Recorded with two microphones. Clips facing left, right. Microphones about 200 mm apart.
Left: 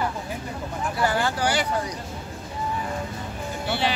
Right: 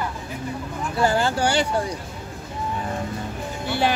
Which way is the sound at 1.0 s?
25° right (ahead or behind).